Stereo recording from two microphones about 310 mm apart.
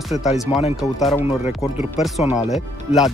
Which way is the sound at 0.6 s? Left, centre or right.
Centre.